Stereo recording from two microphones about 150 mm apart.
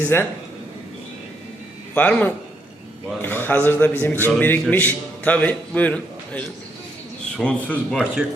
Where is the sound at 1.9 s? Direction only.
10° left (ahead or behind).